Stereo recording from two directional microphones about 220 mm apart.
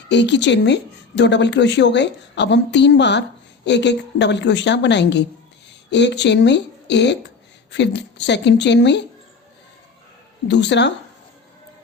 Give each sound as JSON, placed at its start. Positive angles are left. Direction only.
{"t": 0.1, "sound": "speech", "side_deg": 55}
{"t": 10.5, "sound": "speech", "side_deg": 50}